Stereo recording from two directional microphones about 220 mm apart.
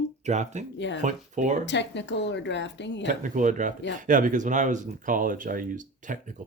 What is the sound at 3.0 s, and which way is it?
Speech, 35° right (ahead or behind).